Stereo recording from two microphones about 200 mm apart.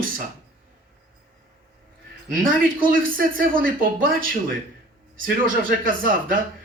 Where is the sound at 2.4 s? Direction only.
45° right (ahead or behind).